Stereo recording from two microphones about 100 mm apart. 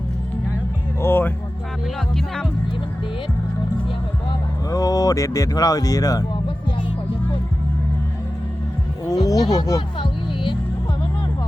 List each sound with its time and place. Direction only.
1.0 s music: 25° left (ahead or behind)
2.1 s speech: 5° left (ahead or behind)
4.7 s speech: 35° left (ahead or behind)
9.0 s a sound: 35° left (ahead or behind)